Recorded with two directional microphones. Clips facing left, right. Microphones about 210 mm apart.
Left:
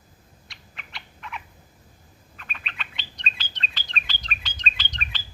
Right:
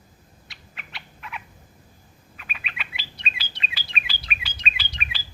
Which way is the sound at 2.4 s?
5° right (ahead or behind).